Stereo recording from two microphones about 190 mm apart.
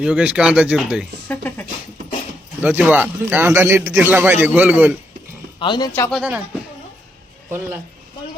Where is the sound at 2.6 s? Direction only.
10° right (ahead or behind).